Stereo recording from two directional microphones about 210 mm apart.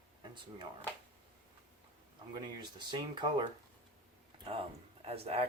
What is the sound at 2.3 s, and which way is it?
Speech, 20° right (ahead or behind).